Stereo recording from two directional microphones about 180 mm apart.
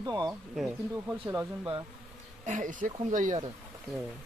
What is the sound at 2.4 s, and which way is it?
Speech, 45° right (ahead or behind).